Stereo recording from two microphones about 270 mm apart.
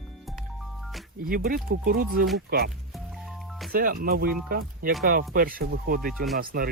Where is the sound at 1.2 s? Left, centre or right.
Right.